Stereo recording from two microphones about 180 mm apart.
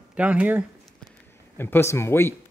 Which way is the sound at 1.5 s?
10° left (ahead or behind).